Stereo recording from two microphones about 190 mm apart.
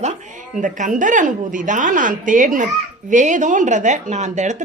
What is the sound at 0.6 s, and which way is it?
A woman's voice, 40° right (ahead or behind).